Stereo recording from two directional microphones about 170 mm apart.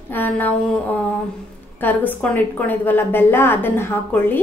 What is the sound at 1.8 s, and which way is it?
A woman's voice, 10° left (ahead or behind).